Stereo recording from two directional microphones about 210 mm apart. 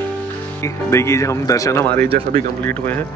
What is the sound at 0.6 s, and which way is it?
Speech, 15° left (ahead or behind).